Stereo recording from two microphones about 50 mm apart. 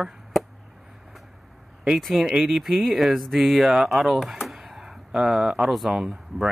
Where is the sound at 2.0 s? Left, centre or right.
Centre.